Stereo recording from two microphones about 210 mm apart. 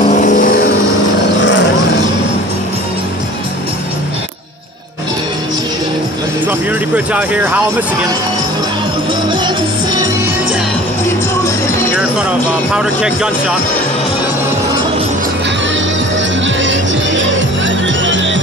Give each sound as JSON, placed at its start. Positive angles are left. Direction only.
{"t": 0.1, "sound": "vehicle", "side_deg": 40}
{"t": 7.1, "sound": "speech", "side_deg": -5}
{"t": 11.9, "sound": "speech", "side_deg": -5}
{"t": 17.6, "sound": "music", "side_deg": -60}